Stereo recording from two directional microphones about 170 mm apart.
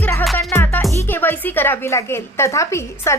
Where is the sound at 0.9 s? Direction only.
10° left (ahead or behind).